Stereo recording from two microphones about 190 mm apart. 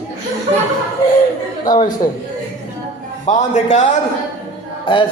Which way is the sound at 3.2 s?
40° left (ahead or behind).